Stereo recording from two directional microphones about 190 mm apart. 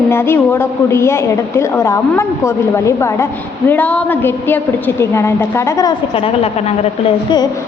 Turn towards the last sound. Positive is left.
turn(degrees=30)  # may be behind; listen again after turning